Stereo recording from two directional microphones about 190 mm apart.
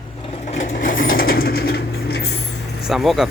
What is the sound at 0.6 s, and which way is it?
Vehicle, 45° left (ahead or behind).